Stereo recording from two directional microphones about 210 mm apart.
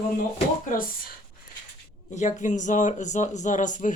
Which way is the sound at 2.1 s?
35° left (ahead or behind).